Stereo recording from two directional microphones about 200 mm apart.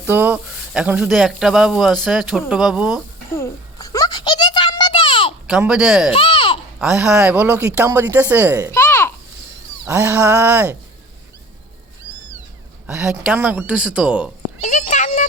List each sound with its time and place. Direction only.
0.0 s a man's voice: 10° right (ahead or behind)
3.3 s a sound: 15° left (ahead or behind)
5.5 s a man's voice: 5° right (ahead or behind)
6.1 s babbling: 25° left (ahead or behind)
6.7 s speech: 5° right (ahead or behind)
8.7 s a sound: 10° left (ahead or behind)
9.8 s speech: 10° right (ahead or behind)
12.9 s a man's voice: 5° right (ahead or behind)
14.6 s a sound: 35° left (ahead or behind)